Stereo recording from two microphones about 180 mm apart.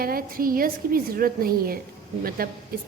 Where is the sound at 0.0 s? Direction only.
55° right (ahead or behind).